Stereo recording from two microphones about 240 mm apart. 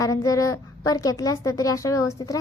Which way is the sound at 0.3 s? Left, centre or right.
Centre.